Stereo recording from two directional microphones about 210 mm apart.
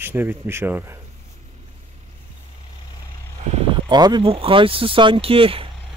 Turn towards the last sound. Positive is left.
turn(degrees=-25)  # may be behind; listen again after turning